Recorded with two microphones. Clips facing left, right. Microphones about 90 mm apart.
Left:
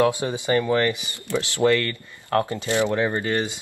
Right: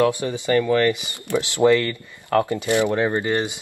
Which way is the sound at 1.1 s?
20° right (ahead or behind).